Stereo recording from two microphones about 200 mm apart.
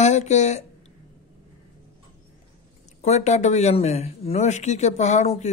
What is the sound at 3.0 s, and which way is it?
Speech, 35° left (ahead or behind).